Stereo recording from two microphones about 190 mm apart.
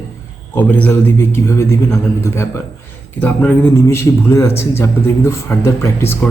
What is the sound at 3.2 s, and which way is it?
A man's voice, 10° left (ahead or behind).